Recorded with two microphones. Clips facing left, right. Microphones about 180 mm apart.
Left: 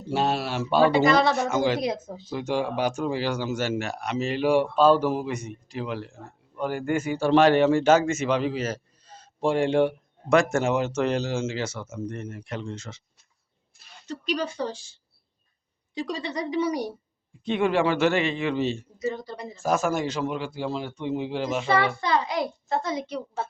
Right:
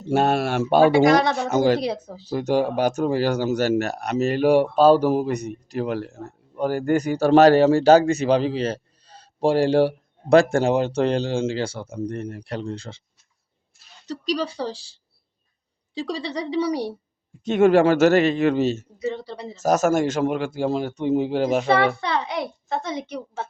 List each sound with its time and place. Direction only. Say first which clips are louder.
0.1 s a man's voice: right 5 dB; 50° right (ahead or behind)
1.0 s speech: right 3 dB; 15° right (ahead or behind)
1.5 s speech: right 4 dB; 40° right (ahead or behind)
14.1 s speech: right 3 dB; 35° right (ahead or behind)
16.0 s speech: right 3 dB; 35° right (ahead or behind)
17.4 s a man's voice: right 7 dB; 45° right (ahead or behind)
22.8 s a woman's voice: even; 20° right (ahead or behind)